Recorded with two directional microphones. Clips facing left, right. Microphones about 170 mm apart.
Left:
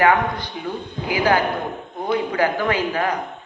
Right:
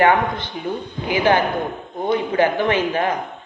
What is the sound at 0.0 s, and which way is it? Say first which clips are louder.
A man's voice: right 1 dB; 25° right (ahead or behind).